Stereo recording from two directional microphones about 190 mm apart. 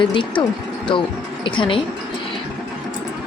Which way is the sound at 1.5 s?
25° left (ahead or behind).